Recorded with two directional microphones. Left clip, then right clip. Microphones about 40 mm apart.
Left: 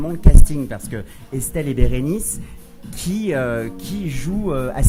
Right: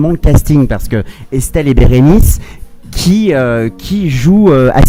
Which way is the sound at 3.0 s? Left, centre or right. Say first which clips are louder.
Right 11 dB; right.